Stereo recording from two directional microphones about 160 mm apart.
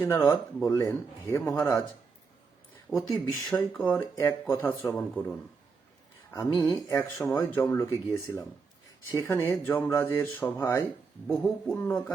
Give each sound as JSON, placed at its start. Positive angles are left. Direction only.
{"t": 0.0, "sound": "speech", "side_deg": 20}
{"t": 3.1, "sound": "speech", "side_deg": 0}
{"t": 3.9, "sound": "speech", "side_deg": 15}
{"t": 6.3, "sound": "speech", "side_deg": 20}